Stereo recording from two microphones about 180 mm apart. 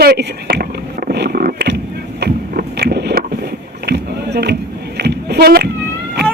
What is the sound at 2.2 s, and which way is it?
Boat, 65° right (ahead or behind).